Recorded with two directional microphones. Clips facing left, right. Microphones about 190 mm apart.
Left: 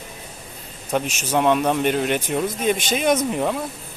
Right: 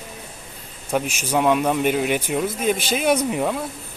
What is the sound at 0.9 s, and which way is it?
Speech, 10° right (ahead or behind).